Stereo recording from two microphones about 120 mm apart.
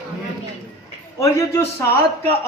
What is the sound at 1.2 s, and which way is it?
Speech, 25° left (ahead or behind).